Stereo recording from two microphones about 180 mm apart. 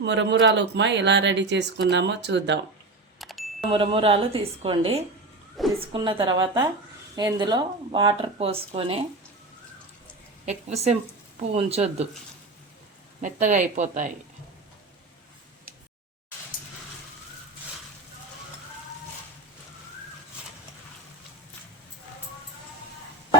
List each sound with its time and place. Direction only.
0.0 s speech: 75° right (ahead or behind)
3.2 s a sound: centre (ahead or behind)
3.7 s speech: 30° right (ahead or behind)
10.4 s speech: 35° right (ahead or behind)
13.2 s speech: 45° right (ahead or behind)